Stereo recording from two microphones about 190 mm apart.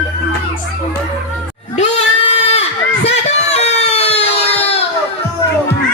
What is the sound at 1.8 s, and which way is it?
Goat, 35° left (ahead or behind).